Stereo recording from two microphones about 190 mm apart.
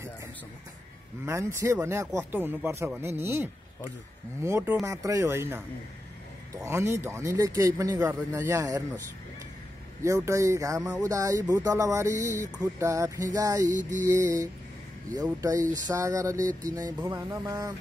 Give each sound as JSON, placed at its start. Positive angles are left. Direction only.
{"t": 1.2, "sound": "speech", "side_deg": -15}
{"t": 6.6, "sound": "speech", "side_deg": -15}
{"t": 10.0, "sound": "speech", "side_deg": -15}
{"t": 13.7, "sound": "mantra", "side_deg": -40}
{"t": 14.1, "sound": "speech", "side_deg": -15}